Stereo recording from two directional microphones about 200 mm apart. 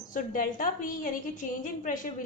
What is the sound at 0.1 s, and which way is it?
A woman's voice, 40° left (ahead or behind).